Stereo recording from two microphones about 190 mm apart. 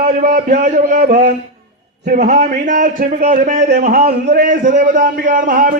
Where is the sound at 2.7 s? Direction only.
45° right (ahead or behind).